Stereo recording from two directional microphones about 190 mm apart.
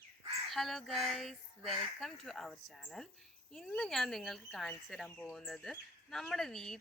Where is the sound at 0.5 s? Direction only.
Centre (ahead or behind).